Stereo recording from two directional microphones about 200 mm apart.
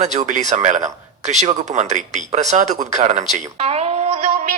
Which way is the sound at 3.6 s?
30° right (ahead or behind).